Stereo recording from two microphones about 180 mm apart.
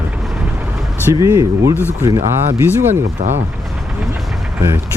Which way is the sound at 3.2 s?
40° right (ahead or behind).